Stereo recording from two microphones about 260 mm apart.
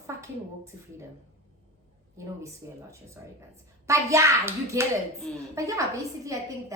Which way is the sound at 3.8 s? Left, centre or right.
Centre.